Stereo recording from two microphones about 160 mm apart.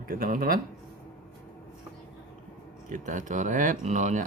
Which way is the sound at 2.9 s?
55° right (ahead or behind).